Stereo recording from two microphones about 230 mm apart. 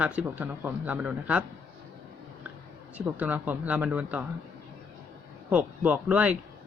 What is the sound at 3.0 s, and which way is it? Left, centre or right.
Speech, centre.